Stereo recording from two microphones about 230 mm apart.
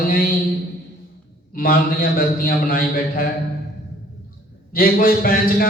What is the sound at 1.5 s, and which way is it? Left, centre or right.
A man's voice, left.